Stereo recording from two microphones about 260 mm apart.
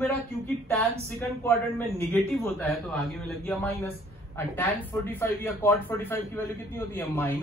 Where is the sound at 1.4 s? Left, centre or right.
Centre.